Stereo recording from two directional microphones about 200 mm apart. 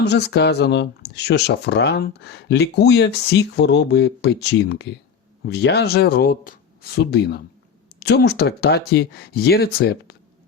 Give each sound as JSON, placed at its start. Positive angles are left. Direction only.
{"t": 0.0, "sound": "speech", "side_deg": 60}